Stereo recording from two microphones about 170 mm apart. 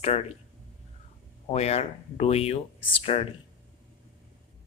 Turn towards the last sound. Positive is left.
turn(degrees=35)  # may be behind; listen again after turning